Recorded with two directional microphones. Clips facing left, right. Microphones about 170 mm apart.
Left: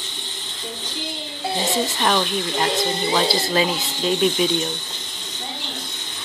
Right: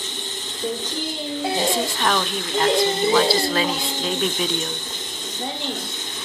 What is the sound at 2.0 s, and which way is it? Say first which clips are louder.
Speech: left 2 dB; 15° left (ahead or behind).